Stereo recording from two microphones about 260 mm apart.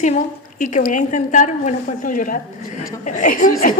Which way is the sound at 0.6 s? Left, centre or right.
Left.